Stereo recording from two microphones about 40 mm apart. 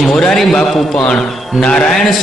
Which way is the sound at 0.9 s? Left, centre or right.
Left.